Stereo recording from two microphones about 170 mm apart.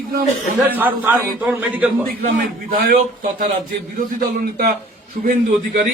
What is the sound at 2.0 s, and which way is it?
A man's voice, 55° right (ahead or behind).